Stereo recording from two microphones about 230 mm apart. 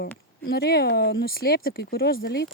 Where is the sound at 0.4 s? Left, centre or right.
Left.